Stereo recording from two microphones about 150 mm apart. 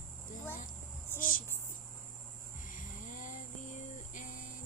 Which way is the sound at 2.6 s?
60° left (ahead or behind).